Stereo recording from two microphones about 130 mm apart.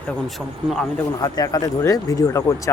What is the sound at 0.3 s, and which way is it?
Speech, centre (ahead or behind).